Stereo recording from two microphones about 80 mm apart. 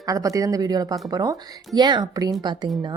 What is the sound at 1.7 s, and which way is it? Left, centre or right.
Speech, right.